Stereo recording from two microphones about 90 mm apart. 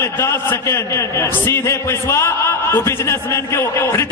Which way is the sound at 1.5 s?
30° left (ahead or behind).